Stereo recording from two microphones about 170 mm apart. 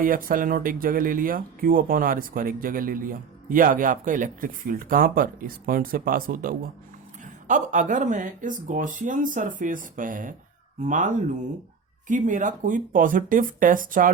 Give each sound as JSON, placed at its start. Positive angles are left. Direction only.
{"t": 0.0, "sound": "speech", "side_deg": -55}